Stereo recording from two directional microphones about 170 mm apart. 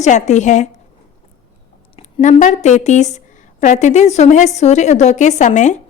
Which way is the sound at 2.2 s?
45° left (ahead or behind).